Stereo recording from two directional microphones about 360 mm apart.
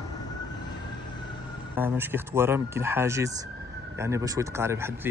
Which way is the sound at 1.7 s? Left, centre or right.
Centre.